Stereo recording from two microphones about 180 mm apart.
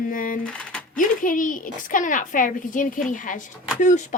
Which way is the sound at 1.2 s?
50° left (ahead or behind).